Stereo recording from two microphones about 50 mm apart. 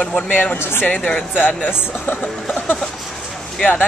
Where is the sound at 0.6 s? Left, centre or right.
Left.